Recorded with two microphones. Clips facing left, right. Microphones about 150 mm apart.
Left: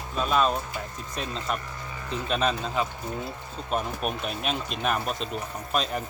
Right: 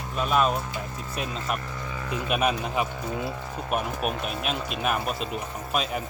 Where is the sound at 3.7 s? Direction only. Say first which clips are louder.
Right 1 dB; 5° right (ahead or behind).